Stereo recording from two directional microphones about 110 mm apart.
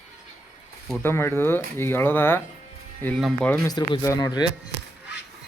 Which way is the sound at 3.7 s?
40° left (ahead or behind).